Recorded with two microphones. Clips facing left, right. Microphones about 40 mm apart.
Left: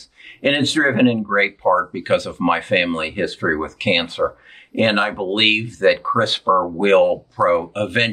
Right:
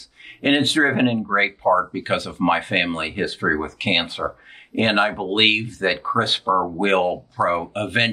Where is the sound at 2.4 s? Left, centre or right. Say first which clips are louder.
Right 1 dB; centre.